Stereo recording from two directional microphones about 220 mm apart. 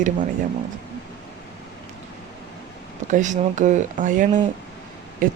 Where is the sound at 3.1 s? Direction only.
35° right (ahead or behind).